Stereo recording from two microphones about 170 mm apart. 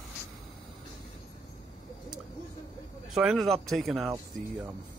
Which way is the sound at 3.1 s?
Centre (ahead or behind).